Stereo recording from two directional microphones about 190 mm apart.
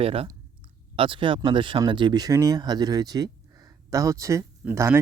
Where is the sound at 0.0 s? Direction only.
30° right (ahead or behind).